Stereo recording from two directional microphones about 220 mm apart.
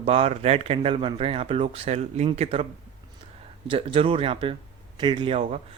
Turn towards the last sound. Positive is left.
turn(degrees=-25)  # may be behind; listen again after turning